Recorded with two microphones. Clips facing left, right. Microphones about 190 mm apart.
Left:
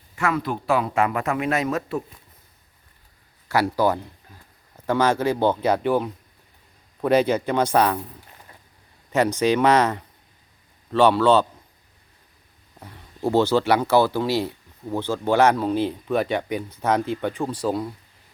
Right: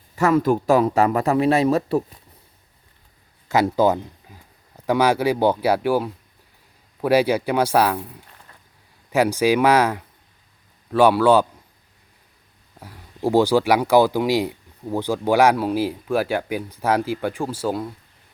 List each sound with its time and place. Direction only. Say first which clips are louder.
0.2 s speech: right 7 dB; 40° right (ahead or behind)
3.5 s speech: right 3 dB; 20° right (ahead or behind)
9.1 s speech: right 2 dB; 10° right (ahead or behind)
12.8 s speech: right 2 dB; 10° right (ahead or behind)